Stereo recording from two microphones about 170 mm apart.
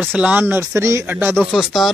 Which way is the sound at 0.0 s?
10° right (ahead or behind).